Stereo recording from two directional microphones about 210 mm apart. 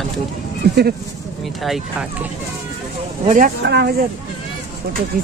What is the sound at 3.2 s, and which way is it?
Speech, 40° right (ahead or behind).